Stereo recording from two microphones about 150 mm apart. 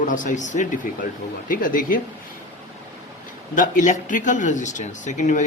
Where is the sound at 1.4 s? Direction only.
65° left (ahead or behind).